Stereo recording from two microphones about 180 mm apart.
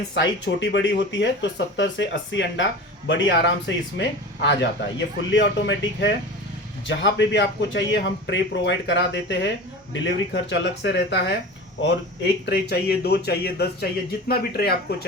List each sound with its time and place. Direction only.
0.1 s speech: 80° left
3.9 s speech: 80° left; by 15.0 s 60° left (ahead or behind)